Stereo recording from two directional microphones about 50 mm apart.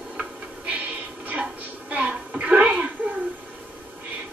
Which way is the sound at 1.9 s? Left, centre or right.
Right.